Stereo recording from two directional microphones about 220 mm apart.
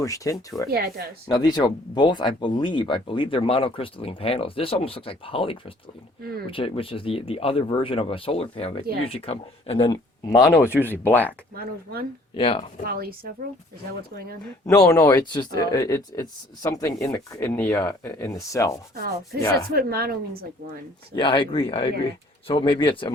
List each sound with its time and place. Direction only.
0.0 s speech: 15° left (ahead or behind)
0.7 s speech: 45° right (ahead or behind)
1.3 s speech: 20° left (ahead or behind)
10.2 s speech: 15° left (ahead or behind)
11.5 s speech: 45° right (ahead or behind)
12.4 s speech: 25° left (ahead or behind)
12.9 s speech: 45° right (ahead or behind)
14.7 s speech: 15° left (ahead or behind)
19.7 s speech: 45° right (ahead or behind)
21.2 s speech: 25° left (ahead or behind)